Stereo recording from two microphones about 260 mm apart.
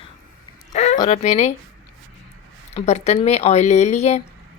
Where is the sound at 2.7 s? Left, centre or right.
Left.